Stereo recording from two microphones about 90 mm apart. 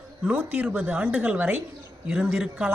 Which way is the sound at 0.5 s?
15° right (ahead or behind).